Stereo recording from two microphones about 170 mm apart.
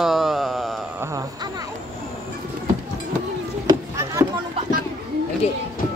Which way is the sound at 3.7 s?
20° right (ahead or behind).